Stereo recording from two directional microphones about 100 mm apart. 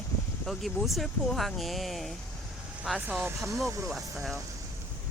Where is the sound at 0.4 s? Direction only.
Centre (ahead or behind).